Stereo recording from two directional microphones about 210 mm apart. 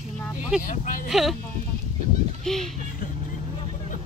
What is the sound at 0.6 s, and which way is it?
Speech, 40° left (ahead or behind).